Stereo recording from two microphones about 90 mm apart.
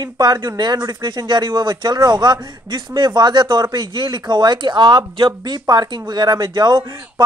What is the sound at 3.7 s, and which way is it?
Speech, 65° right (ahead or behind).